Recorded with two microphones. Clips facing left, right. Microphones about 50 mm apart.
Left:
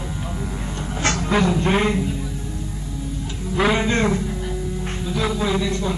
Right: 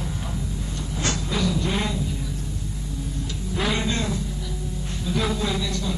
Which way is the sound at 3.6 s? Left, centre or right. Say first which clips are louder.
Left 6 dB; left.